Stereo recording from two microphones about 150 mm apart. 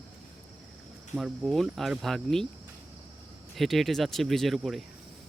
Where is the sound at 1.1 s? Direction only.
5° right (ahead or behind).